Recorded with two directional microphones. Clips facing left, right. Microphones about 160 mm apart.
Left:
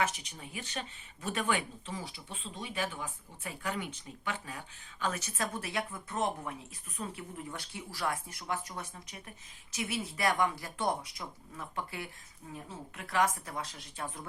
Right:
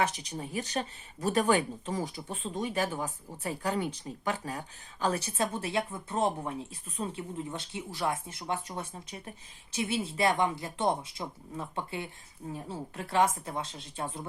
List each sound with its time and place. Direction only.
0.0 s speech: 35° right (ahead or behind)